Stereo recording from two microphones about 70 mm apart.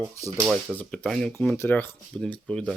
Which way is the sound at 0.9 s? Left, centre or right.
Centre.